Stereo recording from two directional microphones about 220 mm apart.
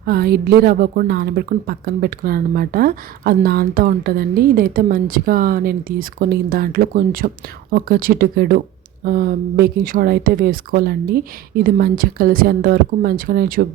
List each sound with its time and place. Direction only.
0.0 s a woman's voice: 45° right (ahead or behind)